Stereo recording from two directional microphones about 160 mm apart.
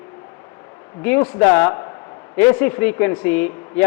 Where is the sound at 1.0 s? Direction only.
10° left (ahead or behind).